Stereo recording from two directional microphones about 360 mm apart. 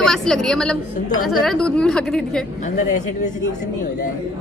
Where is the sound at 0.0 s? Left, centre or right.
Centre.